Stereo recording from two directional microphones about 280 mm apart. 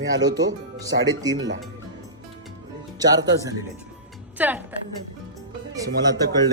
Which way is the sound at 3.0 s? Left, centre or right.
Centre.